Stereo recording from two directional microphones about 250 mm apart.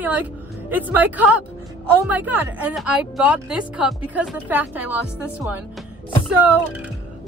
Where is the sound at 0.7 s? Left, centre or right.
Centre.